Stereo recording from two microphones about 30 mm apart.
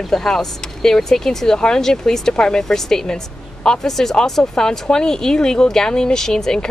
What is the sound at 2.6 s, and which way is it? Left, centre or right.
Speech, centre.